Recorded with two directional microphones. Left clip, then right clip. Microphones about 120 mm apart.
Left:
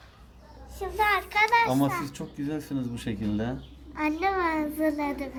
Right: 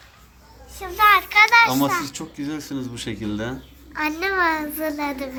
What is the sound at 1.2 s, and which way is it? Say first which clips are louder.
Children playing: right 9 dB; 40° left (ahead or behind).